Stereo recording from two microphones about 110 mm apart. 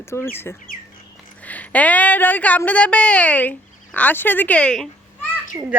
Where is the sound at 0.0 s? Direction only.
25° left (ahead or behind); by 4.9 s 10° left (ahead or behind).